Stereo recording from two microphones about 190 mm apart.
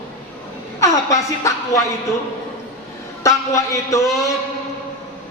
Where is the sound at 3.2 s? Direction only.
15° left (ahead or behind).